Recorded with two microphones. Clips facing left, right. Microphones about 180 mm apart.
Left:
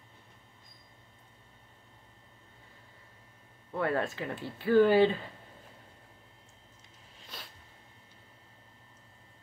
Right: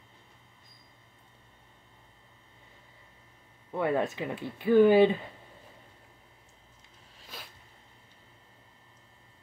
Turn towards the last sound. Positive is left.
turn(degrees=-5)  # may be behind; listen again after turning